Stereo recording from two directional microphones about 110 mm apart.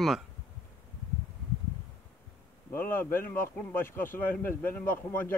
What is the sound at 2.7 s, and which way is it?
A man's voice, 20° left (ahead or behind).